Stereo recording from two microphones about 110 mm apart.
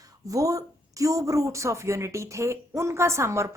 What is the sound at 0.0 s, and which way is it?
A woman's voice, 30° right (ahead or behind).